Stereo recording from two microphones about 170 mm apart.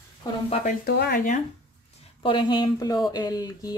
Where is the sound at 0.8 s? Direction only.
70° left (ahead or behind).